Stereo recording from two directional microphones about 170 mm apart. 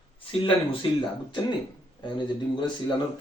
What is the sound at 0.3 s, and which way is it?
Speech, 30° left (ahead or behind).